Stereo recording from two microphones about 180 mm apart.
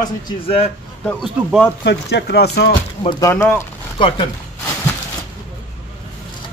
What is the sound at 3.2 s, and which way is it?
Speech, 15° left (ahead or behind).